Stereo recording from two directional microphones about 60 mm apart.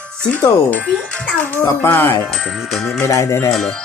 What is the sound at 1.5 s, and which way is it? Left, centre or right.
Speech, left.